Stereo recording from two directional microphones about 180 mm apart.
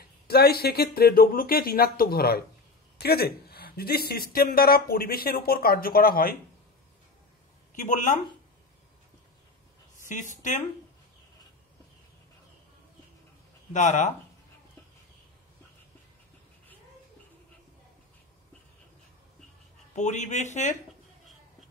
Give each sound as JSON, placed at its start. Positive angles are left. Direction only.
{"t": 0.3, "sound": "speech", "side_deg": 60}
{"t": 7.7, "sound": "speech", "side_deg": 45}
{"t": 10.0, "sound": "speech", "side_deg": 45}
{"t": 13.7, "sound": "speech", "side_deg": 45}
{"t": 20.0, "sound": "a man's voice", "side_deg": 40}